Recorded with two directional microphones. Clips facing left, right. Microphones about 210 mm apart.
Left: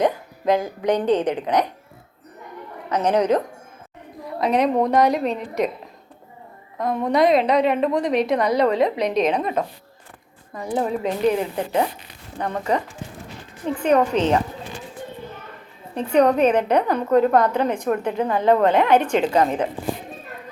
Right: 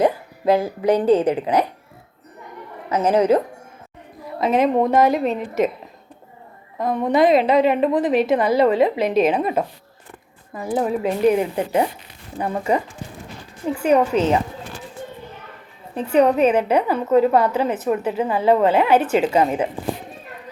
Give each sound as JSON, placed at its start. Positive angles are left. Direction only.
{"t": 0.0, "sound": "a woman's voice", "side_deg": -5}
{"t": 2.9, "sound": "a woman's voice", "side_deg": -5}
{"t": 6.7, "sound": "a woman's voice", "side_deg": 0}
{"t": 16.0, "sound": "a woman's voice", "side_deg": -5}